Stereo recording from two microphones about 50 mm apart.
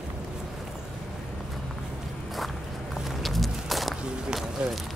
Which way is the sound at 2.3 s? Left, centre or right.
Centre.